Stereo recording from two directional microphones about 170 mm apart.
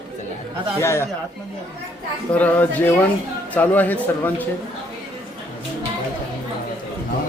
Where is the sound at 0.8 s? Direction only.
15° left (ahead or behind).